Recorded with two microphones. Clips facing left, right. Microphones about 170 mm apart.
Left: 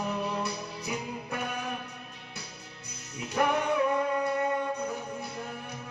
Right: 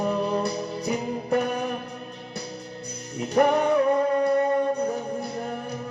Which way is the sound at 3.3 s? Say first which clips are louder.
Right 7 dB; 35° right (ahead or behind).